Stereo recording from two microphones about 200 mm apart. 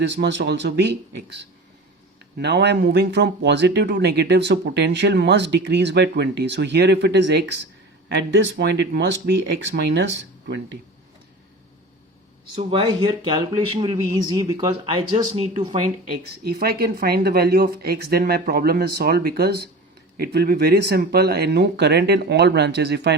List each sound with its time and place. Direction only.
0.1 s speech: 60° right (ahead or behind)
12.5 s speech: 25° right (ahead or behind)
16.1 s speech: 50° right (ahead or behind)